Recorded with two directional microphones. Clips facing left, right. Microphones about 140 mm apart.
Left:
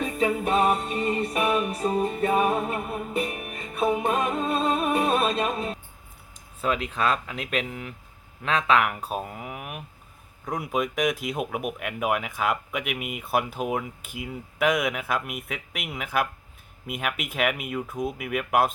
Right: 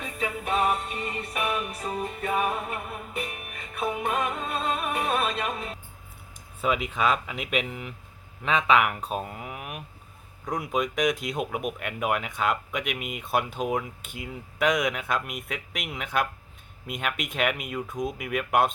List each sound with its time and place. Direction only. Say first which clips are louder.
0.0 s music: left 7 dB; 35° left (ahead or behind)
6.6 s speech: even; 5° right (ahead or behind)